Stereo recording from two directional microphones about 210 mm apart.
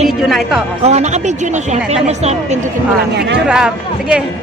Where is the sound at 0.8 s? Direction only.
30° right (ahead or behind).